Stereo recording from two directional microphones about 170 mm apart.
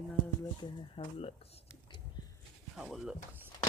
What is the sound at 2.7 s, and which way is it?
Speech, centre (ahead or behind).